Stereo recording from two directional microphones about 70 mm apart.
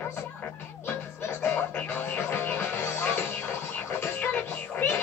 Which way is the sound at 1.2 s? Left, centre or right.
Left.